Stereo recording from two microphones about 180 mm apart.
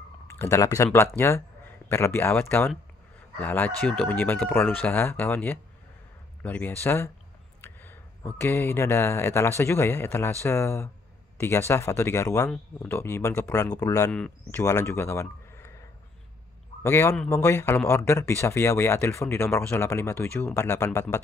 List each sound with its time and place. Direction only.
0.3 s speech: 15° left (ahead or behind)
7.6 s a sound: 10° left (ahead or behind)
8.4 s speech: 15° left (ahead or behind)
16.8 s speech: 15° left (ahead or behind)